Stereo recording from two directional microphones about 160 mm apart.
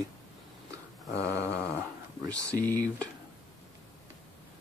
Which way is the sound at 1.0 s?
10° left (ahead or behind).